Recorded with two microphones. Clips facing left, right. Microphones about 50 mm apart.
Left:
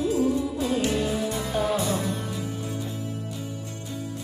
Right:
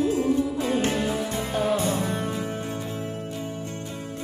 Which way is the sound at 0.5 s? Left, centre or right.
Right.